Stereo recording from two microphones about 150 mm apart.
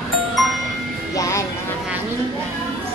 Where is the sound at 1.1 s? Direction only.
20° left (ahead or behind).